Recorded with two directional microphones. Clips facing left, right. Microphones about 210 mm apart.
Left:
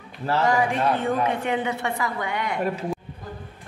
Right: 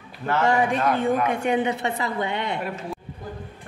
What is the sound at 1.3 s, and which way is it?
A woman's voice, 15° right (ahead or behind).